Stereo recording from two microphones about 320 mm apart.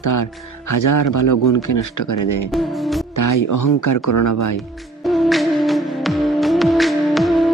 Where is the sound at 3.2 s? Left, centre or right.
Left.